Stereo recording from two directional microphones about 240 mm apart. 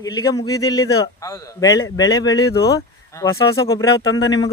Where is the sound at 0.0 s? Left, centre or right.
Centre.